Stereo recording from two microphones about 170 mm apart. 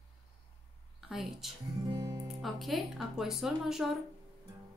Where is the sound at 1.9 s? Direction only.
20° right (ahead or behind).